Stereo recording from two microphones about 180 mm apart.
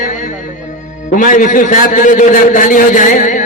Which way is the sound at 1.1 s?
45° left (ahead or behind).